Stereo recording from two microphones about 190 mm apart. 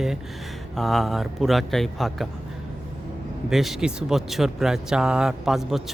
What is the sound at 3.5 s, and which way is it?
Speech, centre (ahead or behind).